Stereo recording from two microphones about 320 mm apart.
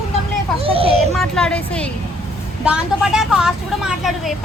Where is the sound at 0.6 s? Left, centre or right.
Centre.